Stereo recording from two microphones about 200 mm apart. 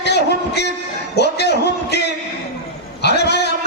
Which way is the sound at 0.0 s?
55° left (ahead or behind).